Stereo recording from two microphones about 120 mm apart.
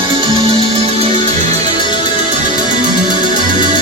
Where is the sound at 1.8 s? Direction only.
40° left (ahead or behind).